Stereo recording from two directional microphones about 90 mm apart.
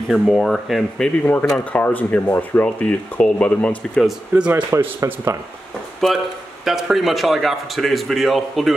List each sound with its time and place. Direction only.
0.1 s speech: centre (ahead or behind)
1.6 s speech: 20° left (ahead or behind)
4.4 s speech: 15° right (ahead or behind)
4.6 s speech: 30° right (ahead or behind)
6.0 s speech: centre (ahead or behind)